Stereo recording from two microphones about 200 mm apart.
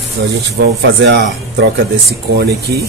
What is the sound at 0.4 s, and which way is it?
Speech, 60° right (ahead or behind).